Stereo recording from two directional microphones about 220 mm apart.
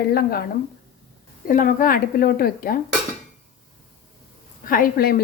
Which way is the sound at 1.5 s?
35° left (ahead or behind).